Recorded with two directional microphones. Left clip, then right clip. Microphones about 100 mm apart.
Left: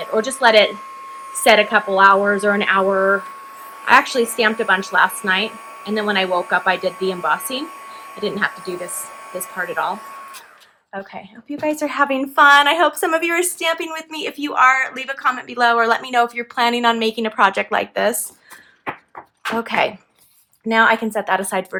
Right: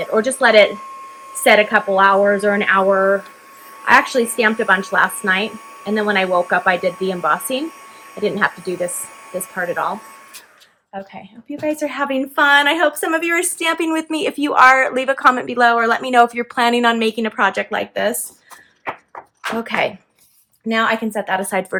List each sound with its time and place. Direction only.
0.0 s a woman's voice: 10° left (ahead or behind)
0.7 s speech: 30° left (ahead or behind)
3.8 s a woman's voice: 15° left (ahead or behind)
10.9 s a woman's voice: 80° left
11.9 s speech: 45° left (ahead or behind)
13.6 s a woman's voice: 5° left (ahead or behind)
14.4 s a woman's voice: 15° right (ahead or behind)
15.5 s a woman's voice: centre (ahead or behind)
17.3 s speech: 35° left (ahead or behind)
19.6 s speech: 40° left (ahead or behind)
21.7 s speech: 5° right (ahead or behind)